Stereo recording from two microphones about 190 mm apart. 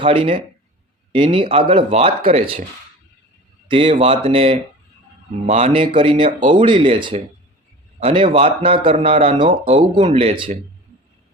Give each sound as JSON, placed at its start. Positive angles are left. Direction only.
{"t": 0.0, "sound": "speech", "side_deg": -30}
{"t": 3.7, "sound": "speech", "side_deg": -30}